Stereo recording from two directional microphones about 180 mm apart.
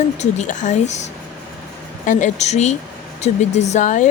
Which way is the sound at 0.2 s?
40° left (ahead or behind).